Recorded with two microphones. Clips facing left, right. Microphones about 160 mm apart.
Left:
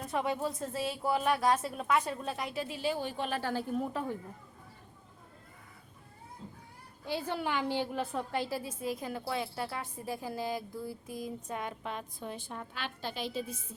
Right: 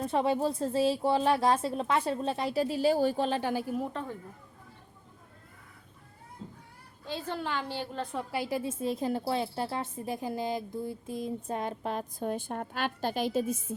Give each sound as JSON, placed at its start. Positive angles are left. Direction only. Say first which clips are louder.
{"t": 0.0, "sound": "speech", "louder": "right 5 dB", "side_deg": -30}
{"t": 3.5, "sound": "a woman's voice", "louder": "right 2 dB", "side_deg": -10}
{"t": 7.0, "sound": "a woman's voice", "louder": "left 1 dB", "side_deg": 10}
{"t": 8.0, "sound": "speech", "louder": "right 1 dB", "side_deg": -5}